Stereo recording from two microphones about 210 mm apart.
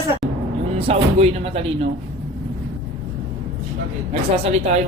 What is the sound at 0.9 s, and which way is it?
Speech, 30° right (ahead or behind).